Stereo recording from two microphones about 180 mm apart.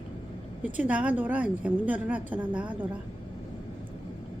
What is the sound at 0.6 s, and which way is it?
A woman's voice, 10° right (ahead or behind).